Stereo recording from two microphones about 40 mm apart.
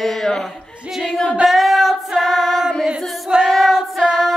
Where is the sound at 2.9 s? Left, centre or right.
Right.